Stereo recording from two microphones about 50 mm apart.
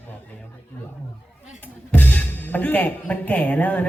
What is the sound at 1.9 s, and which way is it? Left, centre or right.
Music, left.